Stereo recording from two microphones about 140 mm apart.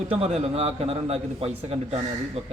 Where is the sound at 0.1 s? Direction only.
50° right (ahead or behind).